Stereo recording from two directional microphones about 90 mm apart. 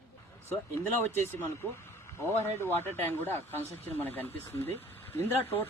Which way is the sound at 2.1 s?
30° left (ahead or behind).